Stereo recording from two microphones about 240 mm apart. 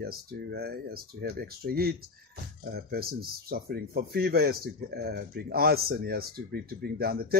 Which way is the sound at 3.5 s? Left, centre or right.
Right.